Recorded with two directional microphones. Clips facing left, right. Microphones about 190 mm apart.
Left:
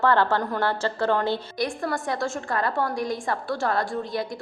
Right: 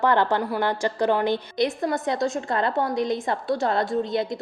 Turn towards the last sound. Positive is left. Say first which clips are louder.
# right 4 dB
turn(degrees=-20)  # may be behind; listen again after turning